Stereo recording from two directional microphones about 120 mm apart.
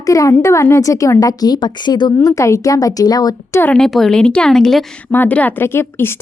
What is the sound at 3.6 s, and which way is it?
A woman's voice, 5° left (ahead or behind).